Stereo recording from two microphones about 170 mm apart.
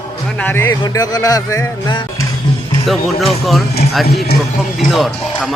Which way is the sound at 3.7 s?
70° left (ahead or behind).